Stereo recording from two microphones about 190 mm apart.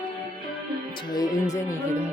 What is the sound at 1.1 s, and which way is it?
Speech, 20° left (ahead or behind).